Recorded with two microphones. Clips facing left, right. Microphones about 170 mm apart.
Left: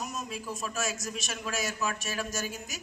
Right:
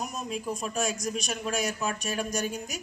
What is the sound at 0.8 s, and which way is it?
Speech, 5° left (ahead or behind).